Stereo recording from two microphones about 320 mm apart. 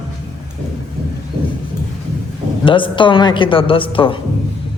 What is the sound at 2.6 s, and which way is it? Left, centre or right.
A woman's voice, centre.